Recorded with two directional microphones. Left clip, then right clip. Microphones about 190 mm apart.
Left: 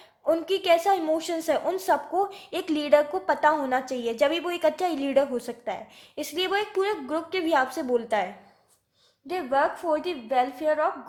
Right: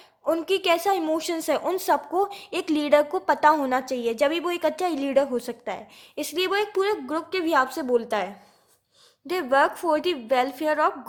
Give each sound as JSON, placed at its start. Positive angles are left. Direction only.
{"t": 0.3, "sound": "a woman's voice", "side_deg": -20}
{"t": 9.2, "sound": "a woman's voice", "side_deg": -35}